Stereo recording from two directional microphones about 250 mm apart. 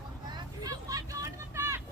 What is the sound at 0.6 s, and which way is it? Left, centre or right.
Vehicle, centre.